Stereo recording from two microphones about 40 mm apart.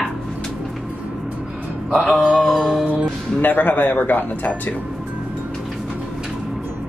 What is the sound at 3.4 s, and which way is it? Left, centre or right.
A man's voice, left.